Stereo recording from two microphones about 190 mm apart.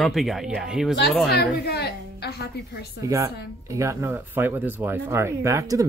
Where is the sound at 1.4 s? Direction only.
60° left (ahead or behind).